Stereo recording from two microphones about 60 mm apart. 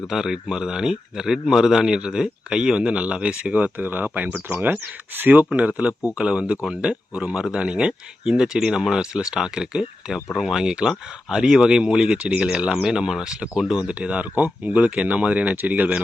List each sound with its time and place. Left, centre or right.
0.1 s a man's voice: centre; by 16.0 s right